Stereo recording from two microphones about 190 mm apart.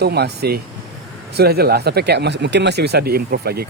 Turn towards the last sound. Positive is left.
turn(degrees=-55)  # may be behind; listen again after turning